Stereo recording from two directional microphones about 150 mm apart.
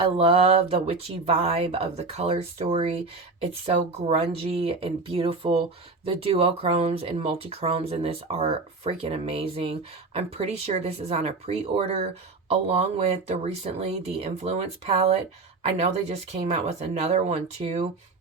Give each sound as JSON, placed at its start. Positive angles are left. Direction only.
{"t": 0.0, "sound": "speech", "side_deg": -40}